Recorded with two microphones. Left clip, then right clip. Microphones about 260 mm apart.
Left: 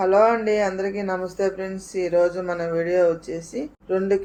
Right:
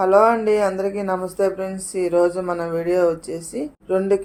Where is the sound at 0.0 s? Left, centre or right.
Right.